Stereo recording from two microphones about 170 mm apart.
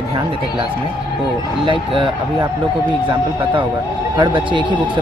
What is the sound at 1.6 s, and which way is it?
Speech, 30° right (ahead or behind).